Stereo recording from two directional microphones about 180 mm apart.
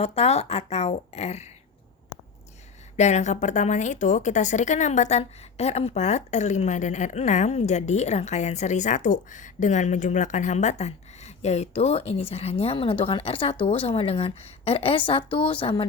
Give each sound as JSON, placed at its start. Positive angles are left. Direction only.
{"t": 0.0, "sound": "a woman's voice", "side_deg": 35}
{"t": 2.9, "sound": "a woman's voice", "side_deg": 40}